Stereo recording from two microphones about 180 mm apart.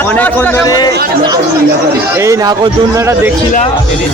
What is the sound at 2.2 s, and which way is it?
A man's voice, 20° right (ahead or behind).